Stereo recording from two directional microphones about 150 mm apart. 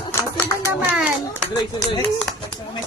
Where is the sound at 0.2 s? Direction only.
15° left (ahead or behind).